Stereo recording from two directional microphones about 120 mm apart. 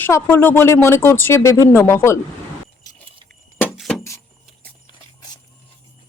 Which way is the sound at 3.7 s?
Centre (ahead or behind).